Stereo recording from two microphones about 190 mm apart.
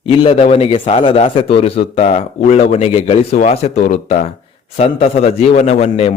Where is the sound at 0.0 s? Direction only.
30° left (ahead or behind).